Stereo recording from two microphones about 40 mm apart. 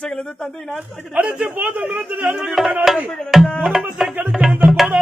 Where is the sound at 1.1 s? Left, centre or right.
Right.